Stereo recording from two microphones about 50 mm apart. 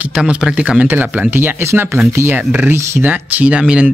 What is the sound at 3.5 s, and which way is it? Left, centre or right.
Speech, right.